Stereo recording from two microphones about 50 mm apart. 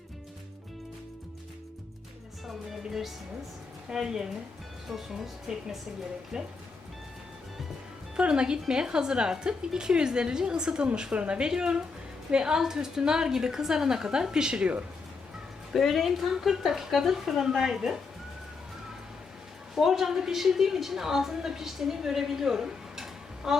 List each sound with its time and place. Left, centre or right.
2.5 s a woman's voice: centre
8.1 s a woman's voice: centre
15.7 s a woman's voice: centre
19.7 s a woman's voice: centre
23.0 s a sound: centre